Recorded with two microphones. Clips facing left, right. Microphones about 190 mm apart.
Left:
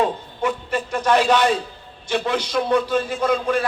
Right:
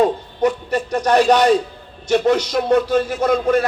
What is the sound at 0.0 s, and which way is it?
A man's voice, 40° right (ahead or behind).